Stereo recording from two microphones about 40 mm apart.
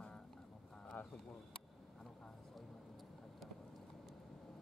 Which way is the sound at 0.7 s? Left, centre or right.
Centre.